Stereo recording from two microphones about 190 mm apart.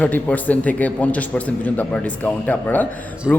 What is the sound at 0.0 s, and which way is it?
Speech, 5° left (ahead or behind).